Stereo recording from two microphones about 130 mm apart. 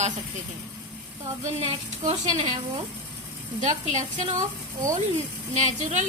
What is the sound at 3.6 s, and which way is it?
Speech, 65° right (ahead or behind).